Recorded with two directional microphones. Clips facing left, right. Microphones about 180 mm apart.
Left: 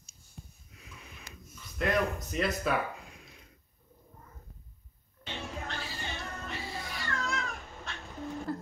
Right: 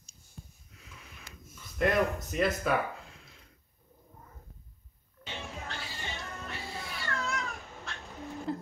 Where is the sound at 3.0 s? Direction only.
15° left (ahead or behind).